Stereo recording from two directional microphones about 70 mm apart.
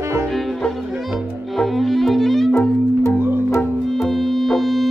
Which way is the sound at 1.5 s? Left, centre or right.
Centre.